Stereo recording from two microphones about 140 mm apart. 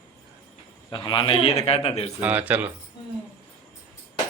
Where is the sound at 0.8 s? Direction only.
35° left (ahead or behind).